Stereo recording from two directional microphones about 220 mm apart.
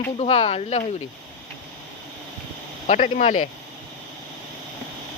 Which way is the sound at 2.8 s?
35° left (ahead or behind).